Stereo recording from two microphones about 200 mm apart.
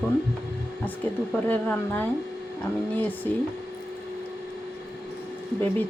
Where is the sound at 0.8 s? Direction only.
10° left (ahead or behind).